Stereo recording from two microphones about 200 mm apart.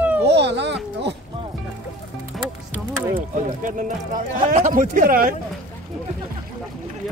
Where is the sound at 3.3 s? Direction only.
40° right (ahead or behind).